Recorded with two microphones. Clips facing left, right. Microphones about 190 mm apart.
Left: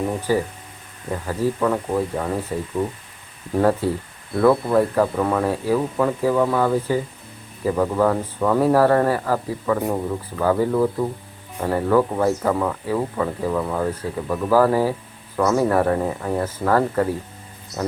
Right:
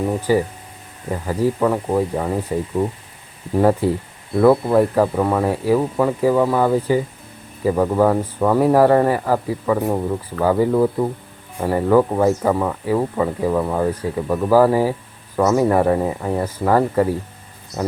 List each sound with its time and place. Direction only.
0.2 s speech: 15° right (ahead or behind)
1.5 s speech: 20° right (ahead or behind)